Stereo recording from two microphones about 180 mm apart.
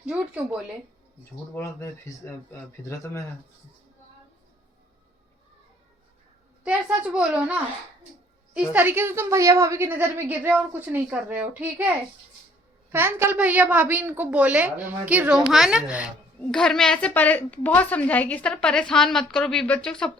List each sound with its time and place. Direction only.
0.0 s a woman's voice: 5° right (ahead or behind)
1.5 s speech: 15° left (ahead or behind)
6.7 s a woman's voice: 5° right (ahead or behind)
12.9 s a woman's voice: 15° right (ahead or behind); by 20.1 s 5° left (ahead or behind)